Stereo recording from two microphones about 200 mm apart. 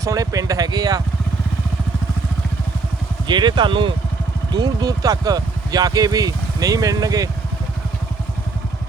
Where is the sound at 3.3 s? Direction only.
20° right (ahead or behind).